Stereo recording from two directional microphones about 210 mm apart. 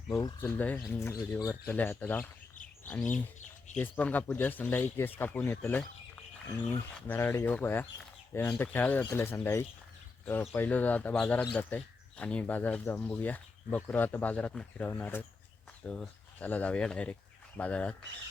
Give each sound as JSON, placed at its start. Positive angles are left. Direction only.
{"t": 0.1, "sound": "speech", "side_deg": 15}
{"t": 3.1, "sound": "speech", "side_deg": 35}
{"t": 3.8, "sound": "speech", "side_deg": 10}
{"t": 7.1, "sound": "speech", "side_deg": 10}